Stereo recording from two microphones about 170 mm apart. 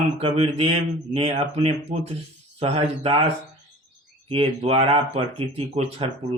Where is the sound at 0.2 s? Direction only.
35° right (ahead or behind).